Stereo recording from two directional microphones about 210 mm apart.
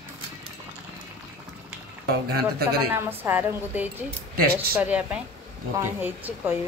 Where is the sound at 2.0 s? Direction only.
45° right (ahead or behind).